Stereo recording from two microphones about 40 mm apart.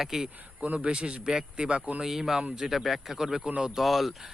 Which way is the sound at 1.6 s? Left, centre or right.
Right.